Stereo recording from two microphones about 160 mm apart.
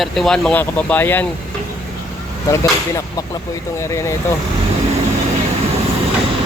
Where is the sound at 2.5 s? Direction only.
20° left (ahead or behind).